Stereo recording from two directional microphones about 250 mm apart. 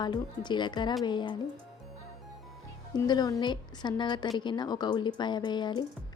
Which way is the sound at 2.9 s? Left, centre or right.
Centre.